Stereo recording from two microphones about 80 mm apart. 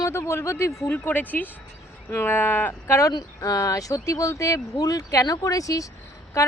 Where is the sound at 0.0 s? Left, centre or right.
Left.